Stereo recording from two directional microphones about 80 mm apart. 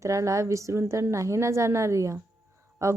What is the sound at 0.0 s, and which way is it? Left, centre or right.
A woman's voice, right.